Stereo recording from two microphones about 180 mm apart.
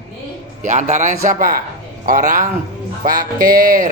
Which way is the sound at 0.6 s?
45° right (ahead or behind).